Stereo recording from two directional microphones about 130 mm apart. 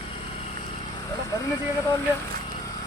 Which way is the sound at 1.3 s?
25° left (ahead or behind).